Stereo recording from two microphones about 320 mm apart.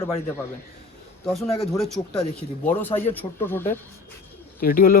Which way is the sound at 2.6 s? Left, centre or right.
Centre.